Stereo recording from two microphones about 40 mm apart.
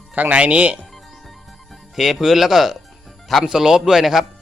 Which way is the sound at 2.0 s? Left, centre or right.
Centre.